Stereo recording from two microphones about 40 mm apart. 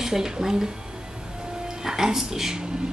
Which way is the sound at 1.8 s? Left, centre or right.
Centre.